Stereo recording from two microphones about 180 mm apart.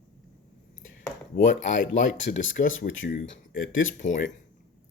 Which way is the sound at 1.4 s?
45° left (ahead or behind).